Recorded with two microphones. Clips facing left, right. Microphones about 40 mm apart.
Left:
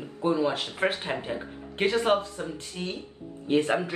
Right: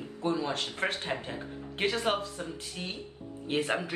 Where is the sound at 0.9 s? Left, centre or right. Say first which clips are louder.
Left 3 dB; left.